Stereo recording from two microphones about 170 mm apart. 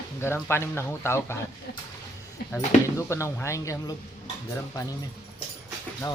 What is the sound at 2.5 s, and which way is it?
Speech, 15° left (ahead or behind).